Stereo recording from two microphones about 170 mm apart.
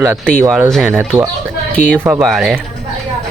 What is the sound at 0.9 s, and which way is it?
Speech, 10° right (ahead or behind).